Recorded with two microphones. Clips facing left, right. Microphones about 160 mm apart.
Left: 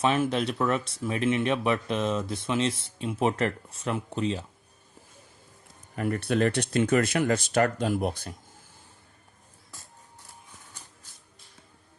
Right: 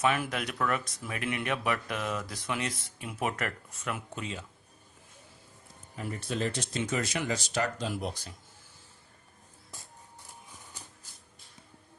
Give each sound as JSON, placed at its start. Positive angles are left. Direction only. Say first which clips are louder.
{"t": 0.0, "sound": "speech", "louder": "left 5 dB", "side_deg": 25}
{"t": 6.0, "sound": "speech", "louder": "left 8 dB", "side_deg": 65}